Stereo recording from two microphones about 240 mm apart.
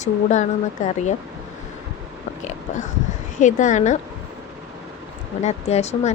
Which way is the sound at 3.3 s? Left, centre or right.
Left.